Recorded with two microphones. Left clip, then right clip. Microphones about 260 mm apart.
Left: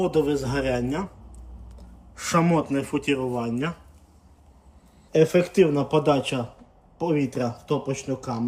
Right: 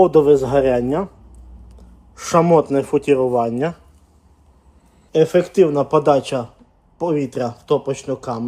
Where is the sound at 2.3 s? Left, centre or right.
Right.